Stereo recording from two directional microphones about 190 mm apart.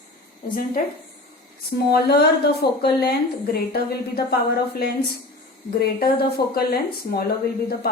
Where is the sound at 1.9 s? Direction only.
55° left (ahead or behind).